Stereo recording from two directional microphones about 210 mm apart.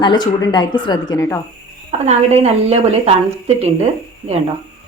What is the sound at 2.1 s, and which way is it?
A woman's voice, 30° right (ahead or behind).